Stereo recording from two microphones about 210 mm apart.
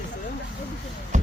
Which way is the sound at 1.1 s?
35° right (ahead or behind).